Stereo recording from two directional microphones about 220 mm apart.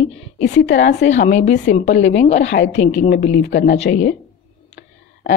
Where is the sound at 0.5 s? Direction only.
50° left (ahead or behind).